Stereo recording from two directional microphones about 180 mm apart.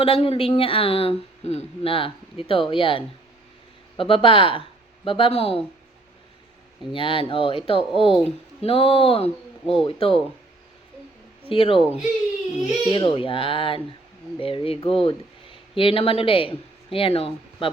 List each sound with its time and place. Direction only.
0.0 s a woman's voice: 30° left (ahead or behind)
6.9 s a woman's voice: 30° left (ahead or behind)
11.4 s speech: 30° left (ahead or behind)
11.8 s speech: centre (ahead or behind)
12.9 s a woman's voice: 25° left (ahead or behind)